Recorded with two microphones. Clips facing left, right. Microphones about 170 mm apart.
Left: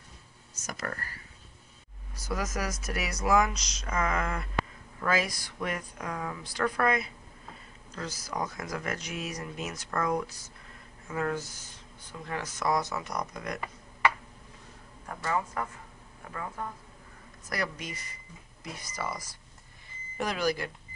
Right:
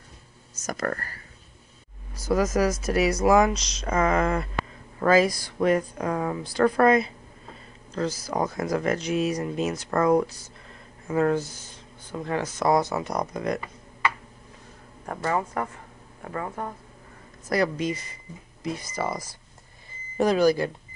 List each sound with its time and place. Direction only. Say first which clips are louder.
0.6 s speech: right 8 dB; 45° right (ahead or behind)
2.2 s speech: right 11 dB; 30° right (ahead or behind)
15.0 s speech: right 5 dB; 50° right (ahead or behind)
17.5 s speech: right 11 dB; 25° right (ahead or behind)